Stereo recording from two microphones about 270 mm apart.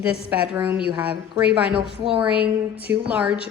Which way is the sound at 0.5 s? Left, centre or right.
Centre.